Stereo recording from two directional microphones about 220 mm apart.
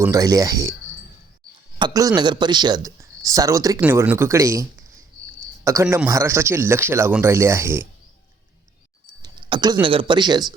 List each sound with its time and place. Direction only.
0.0 s speech: 15° right (ahead or behind)
1.8 s speech: 15° right (ahead or behind)
9.2 s speech: 20° right (ahead or behind)